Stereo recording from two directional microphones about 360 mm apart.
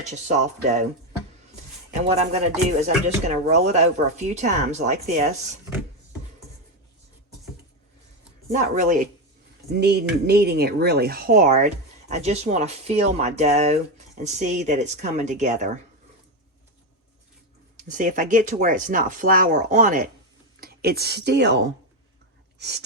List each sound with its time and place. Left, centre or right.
0.1 s speech: centre
2.0 s speech: centre
8.5 s speech: right
17.7 s a woman's voice: right